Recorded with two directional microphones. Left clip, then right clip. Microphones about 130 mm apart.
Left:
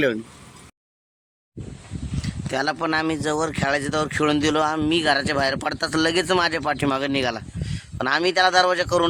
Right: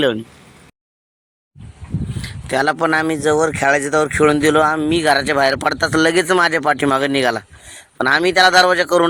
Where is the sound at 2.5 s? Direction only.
25° right (ahead or behind).